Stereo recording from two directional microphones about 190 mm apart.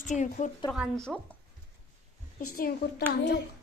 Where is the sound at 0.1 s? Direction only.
40° left (ahead or behind).